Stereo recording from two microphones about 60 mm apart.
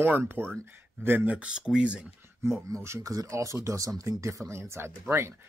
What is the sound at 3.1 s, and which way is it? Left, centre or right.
Speech, right.